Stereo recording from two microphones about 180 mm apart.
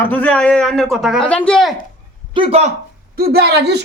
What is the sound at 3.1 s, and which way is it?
Speech, 60° right (ahead or behind).